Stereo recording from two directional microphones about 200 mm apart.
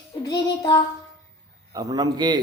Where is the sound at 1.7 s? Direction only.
20° right (ahead or behind).